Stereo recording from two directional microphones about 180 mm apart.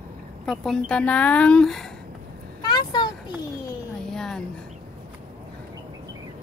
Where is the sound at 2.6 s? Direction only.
25° left (ahead or behind).